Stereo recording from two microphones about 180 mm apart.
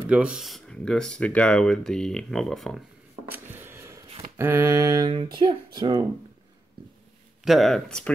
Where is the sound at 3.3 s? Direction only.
10° right (ahead or behind).